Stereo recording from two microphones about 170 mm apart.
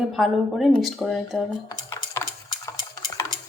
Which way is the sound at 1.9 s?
15° left (ahead or behind).